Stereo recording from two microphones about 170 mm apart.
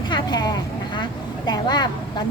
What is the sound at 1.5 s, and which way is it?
Speech, 25° left (ahead or behind).